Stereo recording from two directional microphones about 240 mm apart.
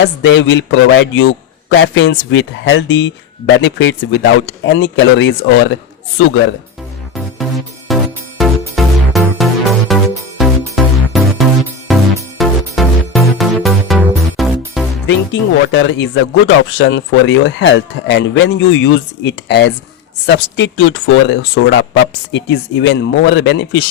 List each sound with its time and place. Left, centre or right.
0.0 s a man's voice: left
7.9 s music: centre
15.0 s a man's voice: left